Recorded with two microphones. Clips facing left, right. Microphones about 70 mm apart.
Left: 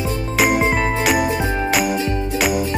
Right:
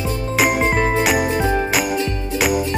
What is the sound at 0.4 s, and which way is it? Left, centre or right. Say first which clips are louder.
Music: left 1 dB; centre.